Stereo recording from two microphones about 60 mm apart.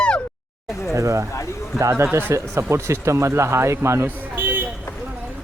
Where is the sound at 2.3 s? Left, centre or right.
Right.